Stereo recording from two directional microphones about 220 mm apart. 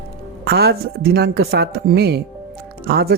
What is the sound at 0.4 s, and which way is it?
Speech, 45° right (ahead or behind).